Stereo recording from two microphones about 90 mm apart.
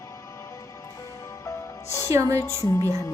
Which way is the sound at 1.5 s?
35° left (ahead or behind).